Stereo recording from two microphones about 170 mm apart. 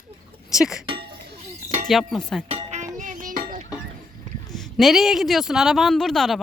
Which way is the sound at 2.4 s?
40° right (ahead or behind).